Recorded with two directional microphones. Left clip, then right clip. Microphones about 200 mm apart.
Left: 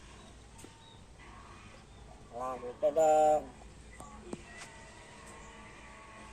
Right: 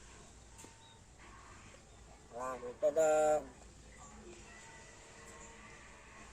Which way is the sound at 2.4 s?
15° right (ahead or behind).